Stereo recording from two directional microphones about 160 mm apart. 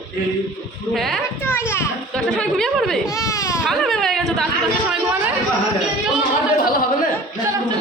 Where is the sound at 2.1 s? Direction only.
5° left (ahead or behind).